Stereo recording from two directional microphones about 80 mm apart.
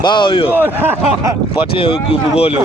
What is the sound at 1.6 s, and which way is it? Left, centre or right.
Speech, left.